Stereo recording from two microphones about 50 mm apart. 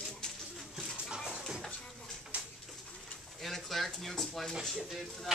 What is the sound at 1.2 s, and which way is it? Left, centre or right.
Music, centre.